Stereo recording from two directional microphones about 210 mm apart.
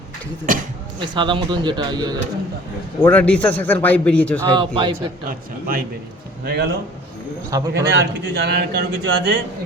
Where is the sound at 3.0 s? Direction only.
10° left (ahead or behind).